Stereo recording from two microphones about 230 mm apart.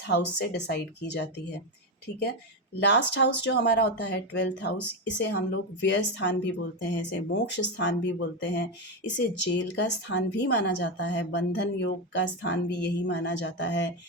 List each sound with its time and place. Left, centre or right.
0.0 s a woman's voice: left
2.8 s a woman's voice: left